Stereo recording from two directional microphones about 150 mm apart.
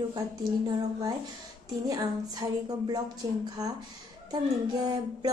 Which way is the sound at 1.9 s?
25° right (ahead or behind).